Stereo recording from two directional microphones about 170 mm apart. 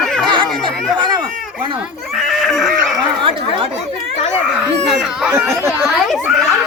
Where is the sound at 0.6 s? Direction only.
25° right (ahead or behind).